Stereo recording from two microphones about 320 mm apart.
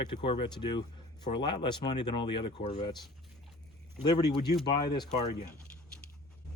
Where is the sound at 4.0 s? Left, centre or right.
Centre.